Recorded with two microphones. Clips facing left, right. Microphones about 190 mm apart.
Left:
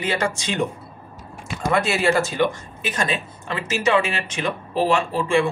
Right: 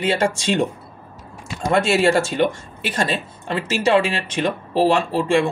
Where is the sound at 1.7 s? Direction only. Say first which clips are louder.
Right 3 dB; 30° right (ahead or behind).